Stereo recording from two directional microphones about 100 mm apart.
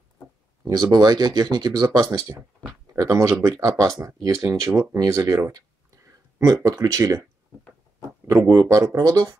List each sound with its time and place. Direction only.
0.9 s speech: 45° right (ahead or behind)
8.3 s speech: 30° right (ahead or behind)